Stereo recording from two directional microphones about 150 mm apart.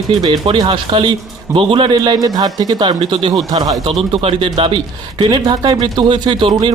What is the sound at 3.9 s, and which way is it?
Speech, 40° right (ahead or behind).